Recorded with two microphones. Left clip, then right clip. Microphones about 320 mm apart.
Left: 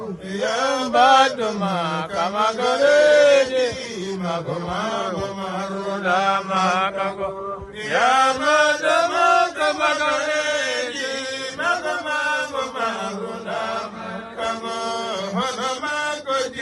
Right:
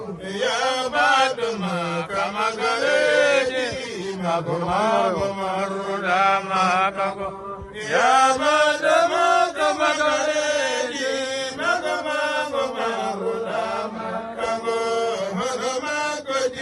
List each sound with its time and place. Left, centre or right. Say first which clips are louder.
1.0 s mantra: left 4 dB; centre
2.6 s chant: left 5 dB; centre
3.1 s a sound: left 4 dB; centre
6.1 s mantra: even; centre
8.5 s chant: left 1 dB; centre